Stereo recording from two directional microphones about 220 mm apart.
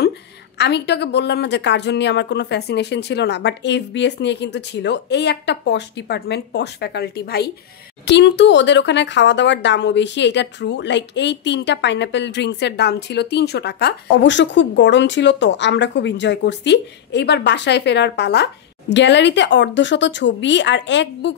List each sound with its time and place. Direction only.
0.6 s speech: 50° left (ahead or behind)